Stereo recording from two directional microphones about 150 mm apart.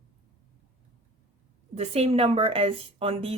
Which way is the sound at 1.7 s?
45° right (ahead or behind).